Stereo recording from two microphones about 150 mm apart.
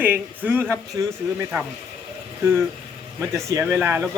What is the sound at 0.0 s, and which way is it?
A man's voice, 10° right (ahead or behind).